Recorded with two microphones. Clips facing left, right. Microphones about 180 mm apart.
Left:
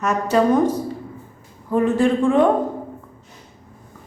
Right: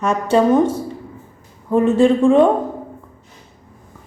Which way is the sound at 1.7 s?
25° right (ahead or behind).